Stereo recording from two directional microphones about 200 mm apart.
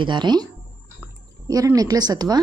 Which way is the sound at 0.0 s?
20° right (ahead or behind).